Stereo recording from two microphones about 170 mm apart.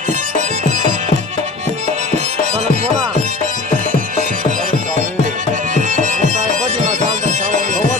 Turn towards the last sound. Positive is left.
turn(degrees=-45)  # may be behind; listen again after turning